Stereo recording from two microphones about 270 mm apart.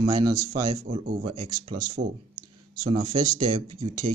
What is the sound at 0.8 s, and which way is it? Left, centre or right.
Speech, right.